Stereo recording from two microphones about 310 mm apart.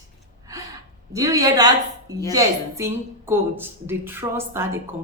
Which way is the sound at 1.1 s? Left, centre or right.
Centre.